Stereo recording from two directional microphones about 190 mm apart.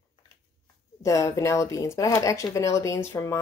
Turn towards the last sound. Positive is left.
turn(degrees=15)  # may be behind; listen again after turning